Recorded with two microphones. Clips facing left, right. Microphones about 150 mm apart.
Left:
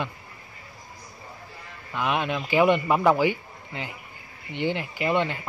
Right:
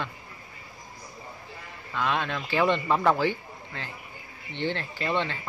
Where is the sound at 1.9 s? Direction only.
15° left (ahead or behind).